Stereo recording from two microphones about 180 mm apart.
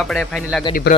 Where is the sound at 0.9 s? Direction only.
65° left (ahead or behind).